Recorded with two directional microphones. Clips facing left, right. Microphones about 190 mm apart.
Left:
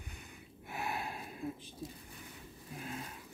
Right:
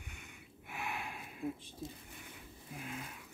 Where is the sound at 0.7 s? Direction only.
35° left (ahead or behind).